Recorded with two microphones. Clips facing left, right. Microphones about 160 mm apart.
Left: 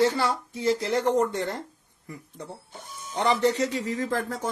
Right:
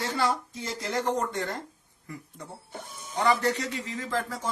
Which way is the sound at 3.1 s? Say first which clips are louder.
Left 3 dB; 30° left (ahead or behind).